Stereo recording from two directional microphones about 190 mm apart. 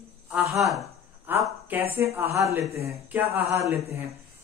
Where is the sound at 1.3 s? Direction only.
10° right (ahead or behind).